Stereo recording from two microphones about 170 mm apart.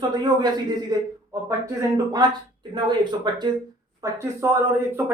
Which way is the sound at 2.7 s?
25° right (ahead or behind).